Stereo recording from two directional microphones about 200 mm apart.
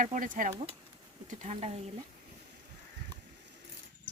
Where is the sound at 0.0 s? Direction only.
40° right (ahead or behind).